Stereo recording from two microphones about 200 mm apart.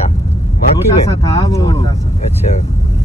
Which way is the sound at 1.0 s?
15° left (ahead or behind).